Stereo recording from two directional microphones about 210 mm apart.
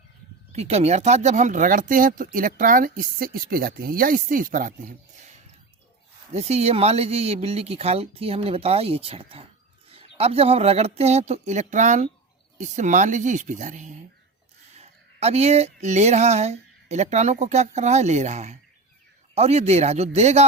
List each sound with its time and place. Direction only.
0.5 s speech: 30° right (ahead or behind)
6.3 s speech: 30° right (ahead or behind)